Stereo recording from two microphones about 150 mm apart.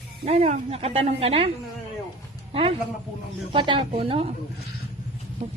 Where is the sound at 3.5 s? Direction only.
35° right (ahead or behind).